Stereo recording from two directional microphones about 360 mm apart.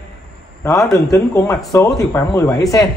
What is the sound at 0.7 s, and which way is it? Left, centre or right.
Speech, centre.